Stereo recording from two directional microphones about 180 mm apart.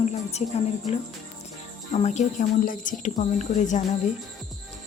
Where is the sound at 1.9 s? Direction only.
40° left (ahead or behind).